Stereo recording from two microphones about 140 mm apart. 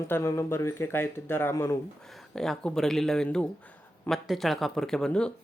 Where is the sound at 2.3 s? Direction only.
5° left (ahead or behind).